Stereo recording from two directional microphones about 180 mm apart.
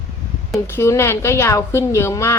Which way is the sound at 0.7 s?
15° left (ahead or behind).